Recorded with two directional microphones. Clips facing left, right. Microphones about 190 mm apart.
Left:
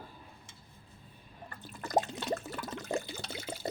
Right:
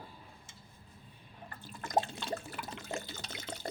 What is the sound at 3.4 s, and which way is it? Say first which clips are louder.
Water: left 3 dB; 10° left (ahead or behind).